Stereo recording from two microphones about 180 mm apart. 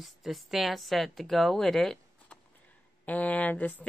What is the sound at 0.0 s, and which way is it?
A woman's voice, centre (ahead or behind).